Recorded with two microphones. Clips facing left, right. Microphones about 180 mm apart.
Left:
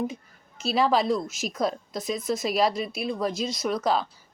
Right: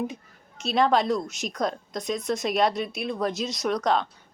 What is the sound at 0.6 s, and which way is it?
Speech, centre (ahead or behind).